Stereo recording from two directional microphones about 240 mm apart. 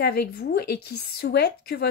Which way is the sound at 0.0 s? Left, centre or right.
Left.